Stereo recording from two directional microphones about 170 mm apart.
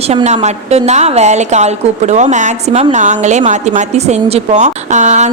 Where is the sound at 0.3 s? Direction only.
40° right (ahead or behind).